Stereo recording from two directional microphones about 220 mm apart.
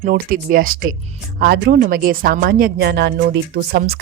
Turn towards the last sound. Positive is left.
turn(degrees=-45)  # may be behind; listen again after turning